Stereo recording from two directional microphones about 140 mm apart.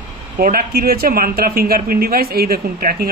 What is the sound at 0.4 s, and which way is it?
Speech, 90° right.